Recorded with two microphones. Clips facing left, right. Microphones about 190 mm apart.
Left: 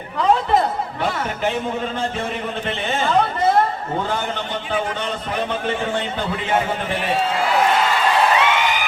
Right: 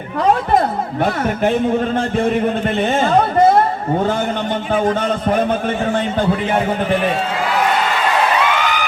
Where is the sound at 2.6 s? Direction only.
45° right (ahead or behind).